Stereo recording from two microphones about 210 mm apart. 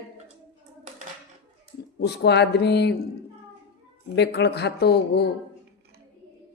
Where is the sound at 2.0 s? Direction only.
55° left (ahead or behind).